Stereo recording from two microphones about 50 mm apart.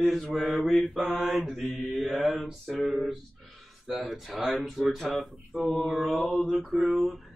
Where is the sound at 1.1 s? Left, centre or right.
Centre.